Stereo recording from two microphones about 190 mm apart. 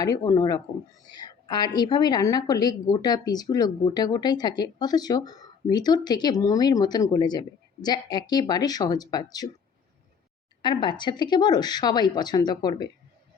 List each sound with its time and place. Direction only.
0.0 s a woman's voice: 20° left (ahead or behind)
10.6 s a woman's voice: 25° left (ahead or behind)